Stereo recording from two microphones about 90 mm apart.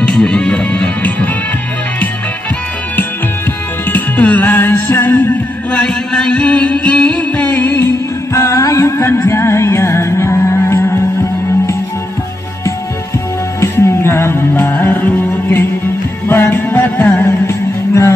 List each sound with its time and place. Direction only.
0.0 s music: 10° left (ahead or behind)
3.9 s music: 20° left (ahead or behind)
5.8 s music: 10° left (ahead or behind); by 11.0 s 30° left (ahead or behind)
13.6 s music: 30° left (ahead or behind)